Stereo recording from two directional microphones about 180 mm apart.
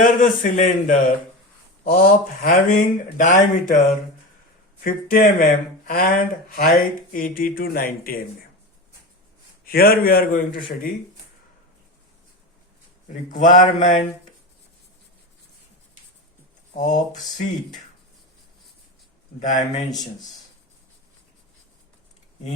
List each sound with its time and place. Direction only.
0.0 s speech: 45° left (ahead or behind)
9.6 s a man's voice: 55° left (ahead or behind)
13.3 s speech: 45° left (ahead or behind)
16.7 s speech: 45° left (ahead or behind)
19.4 s speech: 45° left (ahead or behind)